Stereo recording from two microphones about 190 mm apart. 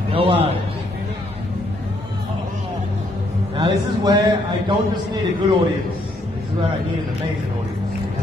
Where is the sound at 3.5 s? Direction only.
25° right (ahead or behind).